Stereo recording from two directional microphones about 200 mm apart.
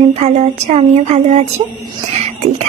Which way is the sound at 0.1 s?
30° right (ahead or behind).